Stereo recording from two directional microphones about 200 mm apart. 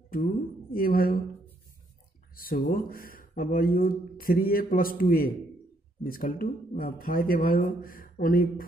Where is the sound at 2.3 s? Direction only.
45° left (ahead or behind).